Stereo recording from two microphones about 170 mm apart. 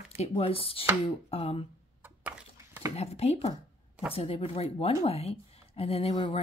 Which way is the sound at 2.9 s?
40° left (ahead or behind).